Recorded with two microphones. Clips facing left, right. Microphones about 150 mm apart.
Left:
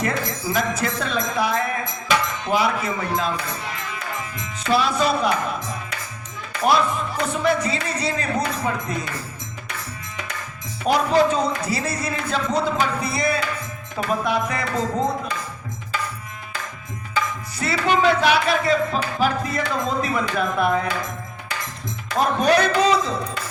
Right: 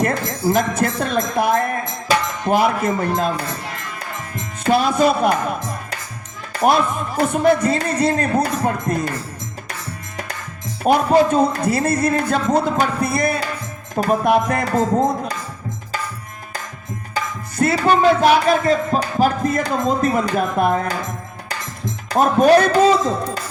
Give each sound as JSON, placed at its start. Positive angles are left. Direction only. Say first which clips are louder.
{"t": 0.0, "sound": "music", "louder": "right 5 dB", "side_deg": -50}
{"t": 2.0, "sound": "a sound", "louder": "right 4 dB", "side_deg": -50}
{"t": 4.2, "sound": "speech", "louder": "right 3 dB", "side_deg": -50}
{"t": 6.5, "sound": "music", "louder": "right 3 dB", "side_deg": -50}
{"t": 10.8, "sound": "music", "louder": "right 4 dB", "side_deg": -50}
{"t": 17.6, "sound": "music", "louder": "right 5 dB", "side_deg": -50}
{"t": 22.1, "sound": "music", "louder": "right 6 dB", "side_deg": -45}